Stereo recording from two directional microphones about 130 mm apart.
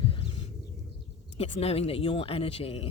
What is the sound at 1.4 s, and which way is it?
Speech, 50° left (ahead or behind).